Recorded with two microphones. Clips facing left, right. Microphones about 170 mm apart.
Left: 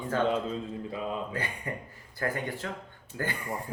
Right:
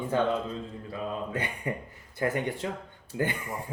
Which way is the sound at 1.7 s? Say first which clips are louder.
Right 4 dB; 20° right (ahead or behind).